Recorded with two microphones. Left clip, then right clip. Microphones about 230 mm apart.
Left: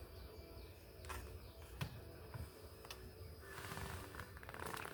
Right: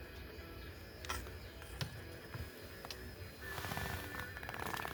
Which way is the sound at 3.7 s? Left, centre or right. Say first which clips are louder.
Right 7 dB; right.